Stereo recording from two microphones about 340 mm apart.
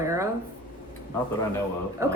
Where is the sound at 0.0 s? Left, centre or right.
Centre.